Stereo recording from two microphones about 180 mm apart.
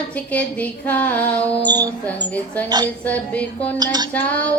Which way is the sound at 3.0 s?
10° left (ahead or behind).